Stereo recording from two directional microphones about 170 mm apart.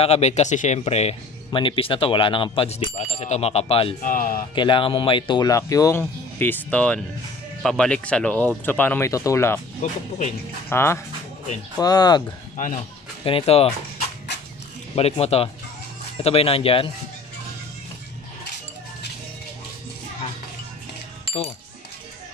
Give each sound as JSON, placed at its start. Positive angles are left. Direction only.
{"t": 0.0, "sound": "speech", "side_deg": 40}
{"t": 4.0, "sound": "speech", "side_deg": 50}
{"t": 4.6, "sound": "speech", "side_deg": 30}
{"t": 9.8, "sound": "speech", "side_deg": 45}
{"t": 10.7, "sound": "speech", "side_deg": 15}
{"t": 12.5, "sound": "speech", "side_deg": 50}
{"t": 13.2, "sound": "speech", "side_deg": 30}
{"t": 15.0, "sound": "speech", "side_deg": 35}
{"t": 21.3, "sound": "speech", "side_deg": 35}